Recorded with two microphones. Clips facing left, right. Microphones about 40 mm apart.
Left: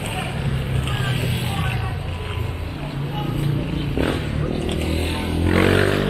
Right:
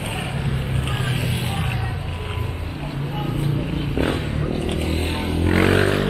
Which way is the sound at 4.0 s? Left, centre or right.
Right.